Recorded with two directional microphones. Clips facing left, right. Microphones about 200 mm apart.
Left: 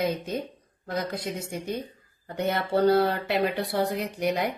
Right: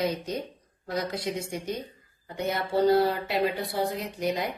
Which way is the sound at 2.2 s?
60° left (ahead or behind).